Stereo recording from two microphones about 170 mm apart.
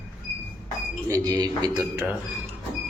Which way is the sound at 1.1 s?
20° right (ahead or behind).